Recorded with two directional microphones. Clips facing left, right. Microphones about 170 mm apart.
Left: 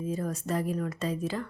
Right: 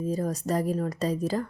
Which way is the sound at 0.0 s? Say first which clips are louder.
Right 4 dB; 35° right (ahead or behind).